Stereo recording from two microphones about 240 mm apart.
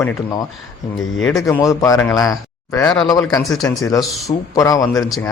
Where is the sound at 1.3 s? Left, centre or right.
Centre.